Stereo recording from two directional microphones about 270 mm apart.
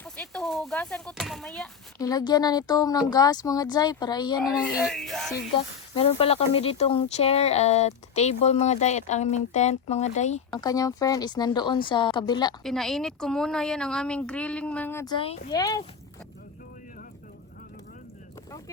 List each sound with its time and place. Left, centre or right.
0.0 s speech: centre
2.0 s speech: centre
4.4 s a woman's voice: centre
5.5 s speech: left
10.5 s speech: centre
12.6 s a woman's voice: centre